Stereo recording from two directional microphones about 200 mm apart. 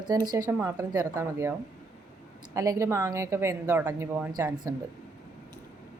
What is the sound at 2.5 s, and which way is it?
A woman's voice, 15° right (ahead or behind).